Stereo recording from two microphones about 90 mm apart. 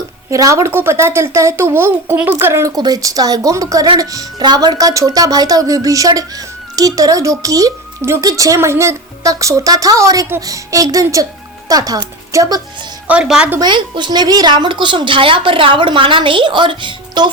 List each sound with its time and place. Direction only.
0.3 s speech: 35° right (ahead or behind)
2.7 s a woman's voice: 45° right (ahead or behind)
13.1 s a woman's voice: 10° right (ahead or behind)
13.6 s a woman's voice: 60° right (ahead or behind)